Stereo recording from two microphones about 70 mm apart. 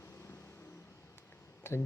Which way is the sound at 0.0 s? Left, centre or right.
Left.